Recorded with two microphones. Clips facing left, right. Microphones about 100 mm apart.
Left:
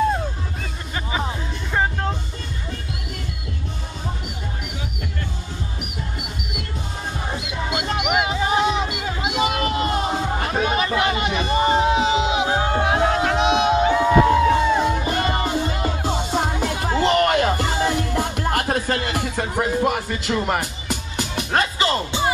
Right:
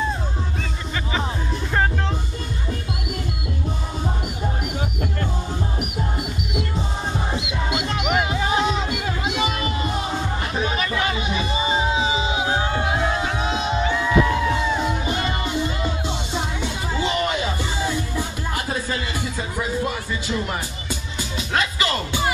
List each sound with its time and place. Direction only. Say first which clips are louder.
8.1 s music: left 1 dB; 10° left (ahead or behind)
9.5 s a sound: left 3 dB; 55° left (ahead or behind)
10.0 s music: left 3 dB; 35° left (ahead or behind)
10.5 s music: left 3 dB; 55° left (ahead or behind)
11.1 s chatter: left 4 dB; 60° left (ahead or behind)
12.4 s music: left 2 dB; 35° left (ahead or behind)
12.8 s music: left 4 dB; 60° left (ahead or behind)
13.8 s music: left 2 dB; 45° left (ahead or behind); by 21.5 s 60° left (ahead or behind)
21.5 s music: left 2 dB; 35° left (ahead or behind)